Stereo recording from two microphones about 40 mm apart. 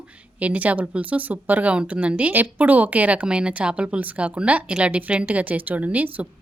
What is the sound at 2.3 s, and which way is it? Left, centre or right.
Speech, right.